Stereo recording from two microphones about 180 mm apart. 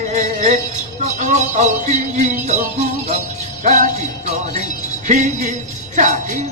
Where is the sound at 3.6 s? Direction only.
40° right (ahead or behind).